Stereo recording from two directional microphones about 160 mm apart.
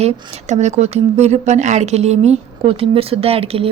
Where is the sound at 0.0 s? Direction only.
45° right (ahead or behind).